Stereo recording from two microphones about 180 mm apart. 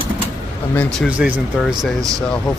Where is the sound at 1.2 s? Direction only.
5° right (ahead or behind).